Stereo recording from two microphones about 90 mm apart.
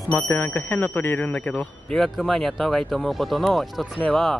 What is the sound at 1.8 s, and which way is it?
Speech, 5° left (ahead or behind).